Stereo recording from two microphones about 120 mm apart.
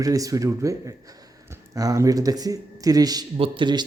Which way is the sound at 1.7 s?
30° right (ahead or behind).